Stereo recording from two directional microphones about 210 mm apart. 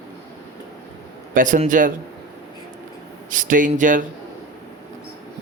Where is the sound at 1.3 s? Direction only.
40° right (ahead or behind).